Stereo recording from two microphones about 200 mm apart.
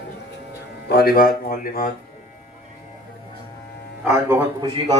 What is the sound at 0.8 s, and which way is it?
A man's voice, 50° left (ahead or behind).